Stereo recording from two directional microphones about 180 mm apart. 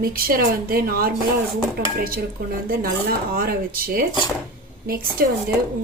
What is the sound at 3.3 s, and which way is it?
Speech, 55° right (ahead or behind).